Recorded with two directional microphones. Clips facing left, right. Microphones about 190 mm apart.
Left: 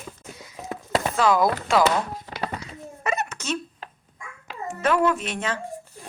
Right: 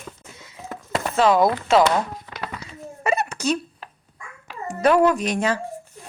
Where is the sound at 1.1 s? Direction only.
25° right (ahead or behind).